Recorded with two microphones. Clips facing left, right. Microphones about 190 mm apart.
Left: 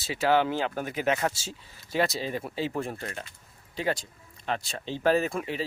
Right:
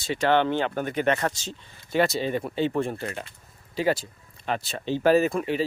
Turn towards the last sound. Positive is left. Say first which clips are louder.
# right 6 dB
turn(degrees=0)  # may be behind; listen again after turning